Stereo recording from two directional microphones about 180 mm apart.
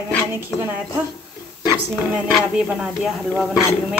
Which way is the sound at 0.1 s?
15° left (ahead or behind).